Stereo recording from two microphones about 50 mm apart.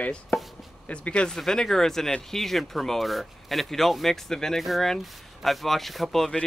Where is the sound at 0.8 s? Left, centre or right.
Left.